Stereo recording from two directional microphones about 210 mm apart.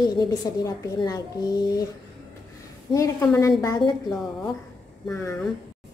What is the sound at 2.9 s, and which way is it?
A woman's voice, 15° left (ahead or behind).